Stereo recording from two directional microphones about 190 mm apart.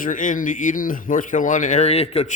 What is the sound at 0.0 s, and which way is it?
Speech, 45° left (ahead or behind).